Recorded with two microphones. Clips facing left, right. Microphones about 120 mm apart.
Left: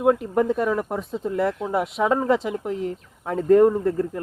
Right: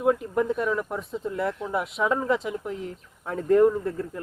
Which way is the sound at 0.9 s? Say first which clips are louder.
Left 5 dB; 75° left (ahead or behind).